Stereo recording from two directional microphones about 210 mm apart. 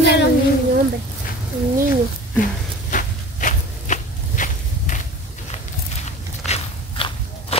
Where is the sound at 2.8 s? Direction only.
40° left (ahead or behind).